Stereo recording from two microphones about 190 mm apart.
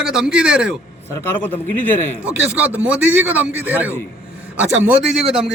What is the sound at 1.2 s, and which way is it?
Speech, 10° left (ahead or behind).